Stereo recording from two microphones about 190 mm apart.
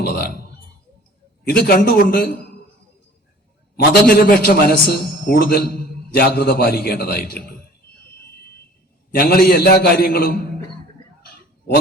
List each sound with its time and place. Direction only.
0.0 s a sound: 55° left (ahead or behind)
1.5 s a man's voice: 55° left (ahead or behind)
4.0 s a man's voice: 55° left (ahead or behind)
9.1 s a man's voice: 50° left (ahead or behind)